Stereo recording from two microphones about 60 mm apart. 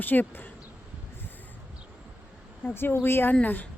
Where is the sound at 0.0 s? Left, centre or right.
Left.